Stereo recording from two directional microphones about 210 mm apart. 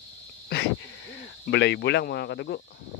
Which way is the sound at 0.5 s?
45° left (ahead or behind).